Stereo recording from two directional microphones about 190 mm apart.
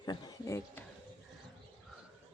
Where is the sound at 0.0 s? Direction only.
20° left (ahead or behind).